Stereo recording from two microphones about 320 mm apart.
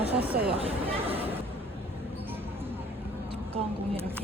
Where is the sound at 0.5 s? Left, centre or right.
Centre.